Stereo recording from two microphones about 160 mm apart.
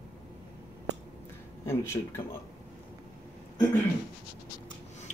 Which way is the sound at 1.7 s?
15° left (ahead or behind).